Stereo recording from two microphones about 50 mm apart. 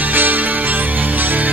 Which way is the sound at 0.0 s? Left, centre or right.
Right.